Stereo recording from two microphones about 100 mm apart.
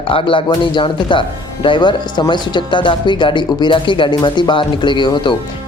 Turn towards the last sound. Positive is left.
turn(degrees=50)  # may be behind; listen again after turning